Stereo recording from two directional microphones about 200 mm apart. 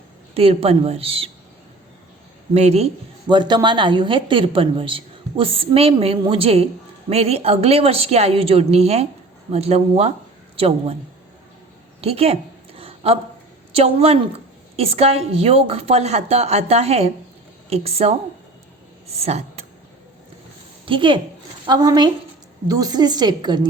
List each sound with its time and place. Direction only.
0.3 s speech: 30° right (ahead or behind)
2.5 s a woman's voice: 30° right (ahead or behind)
11.9 s a sound: 30° right (ahead or behind)
13.7 s a woman's voice: 30° right (ahead or behind)
20.8 s a woman's voice: 25° right (ahead or behind)